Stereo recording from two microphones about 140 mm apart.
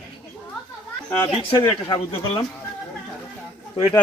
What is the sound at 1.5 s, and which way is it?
Speech, 20° left (ahead or behind).